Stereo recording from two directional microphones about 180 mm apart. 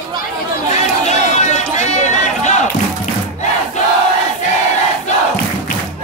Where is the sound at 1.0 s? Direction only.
40° left (ahead or behind).